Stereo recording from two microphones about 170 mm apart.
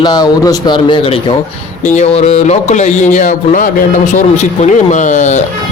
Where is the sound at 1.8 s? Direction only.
45° left (ahead or behind).